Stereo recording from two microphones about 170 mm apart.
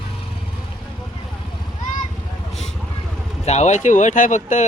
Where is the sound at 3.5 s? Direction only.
40° left (ahead or behind).